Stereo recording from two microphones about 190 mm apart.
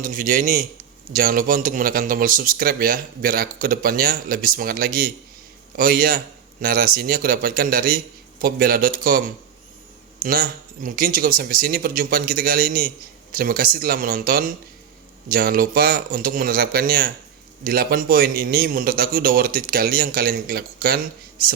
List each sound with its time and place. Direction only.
0.0 s a man's voice: 45° right (ahead or behind)
10.8 s a man's voice: 45° right (ahead or behind)